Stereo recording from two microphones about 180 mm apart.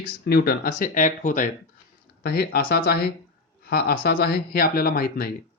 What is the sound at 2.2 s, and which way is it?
Speech, 60° left (ahead or behind).